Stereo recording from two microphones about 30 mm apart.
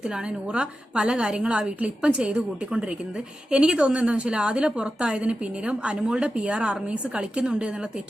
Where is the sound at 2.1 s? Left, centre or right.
Right.